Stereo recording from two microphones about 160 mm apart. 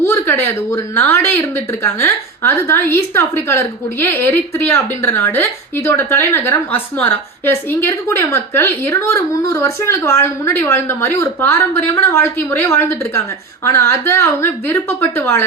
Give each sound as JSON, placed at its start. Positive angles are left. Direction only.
{"t": 0.0, "sound": "a woman's voice", "side_deg": 15}